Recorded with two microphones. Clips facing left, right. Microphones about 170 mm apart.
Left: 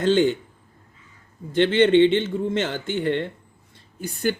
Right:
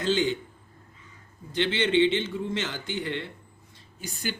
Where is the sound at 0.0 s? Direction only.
50° left (ahead or behind).